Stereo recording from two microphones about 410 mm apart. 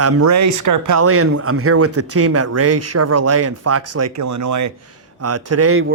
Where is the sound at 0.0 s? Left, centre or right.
Right.